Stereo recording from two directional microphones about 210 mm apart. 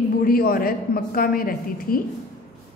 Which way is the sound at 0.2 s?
45° left (ahead or behind).